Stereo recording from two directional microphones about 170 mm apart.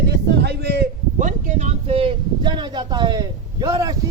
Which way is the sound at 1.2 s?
45° right (ahead or behind).